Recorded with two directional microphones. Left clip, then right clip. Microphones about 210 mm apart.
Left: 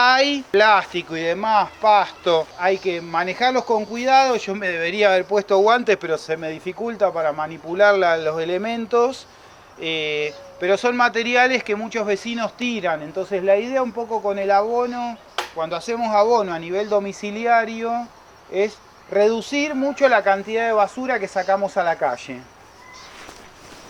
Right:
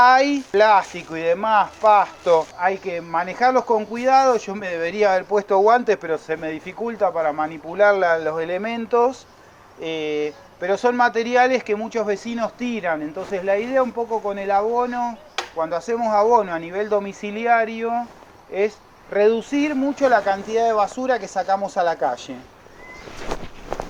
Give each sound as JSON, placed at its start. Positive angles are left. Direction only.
{"t": 0.0, "sound": "speech", "side_deg": 40}
{"t": 19.8, "sound": "speech", "side_deg": 45}